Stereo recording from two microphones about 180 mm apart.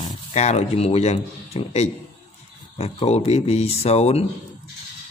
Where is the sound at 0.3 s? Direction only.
40° left (ahead or behind).